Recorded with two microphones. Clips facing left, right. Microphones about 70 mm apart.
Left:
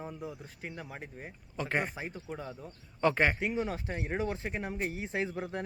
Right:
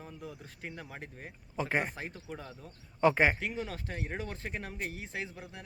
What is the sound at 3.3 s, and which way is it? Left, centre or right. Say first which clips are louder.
Speech: left 4 dB; centre.